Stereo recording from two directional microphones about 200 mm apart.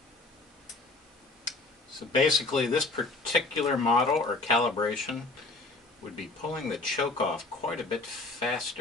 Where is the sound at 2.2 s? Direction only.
Centre (ahead or behind).